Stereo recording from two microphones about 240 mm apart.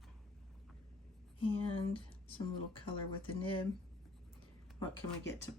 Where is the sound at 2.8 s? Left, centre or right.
Left.